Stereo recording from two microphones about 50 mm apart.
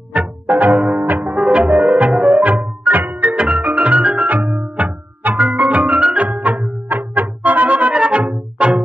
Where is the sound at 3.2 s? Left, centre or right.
Centre.